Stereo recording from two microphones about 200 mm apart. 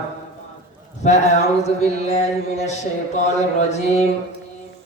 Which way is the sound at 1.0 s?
35° left (ahead or behind).